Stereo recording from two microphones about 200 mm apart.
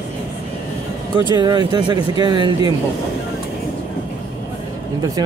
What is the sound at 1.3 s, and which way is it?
Speech, 20° right (ahead or behind).